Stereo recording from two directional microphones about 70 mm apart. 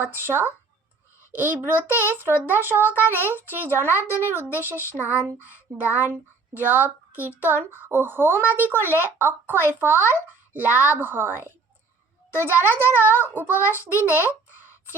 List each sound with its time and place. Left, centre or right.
0.0 s a woman's voice: right
3.2 s a child's voice: left
4.3 s a woman's voice: right